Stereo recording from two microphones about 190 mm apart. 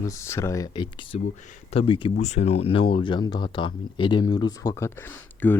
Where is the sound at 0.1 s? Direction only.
15° left (ahead or behind).